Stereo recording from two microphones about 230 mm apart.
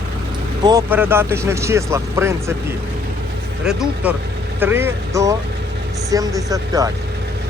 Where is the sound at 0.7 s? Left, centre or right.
Centre.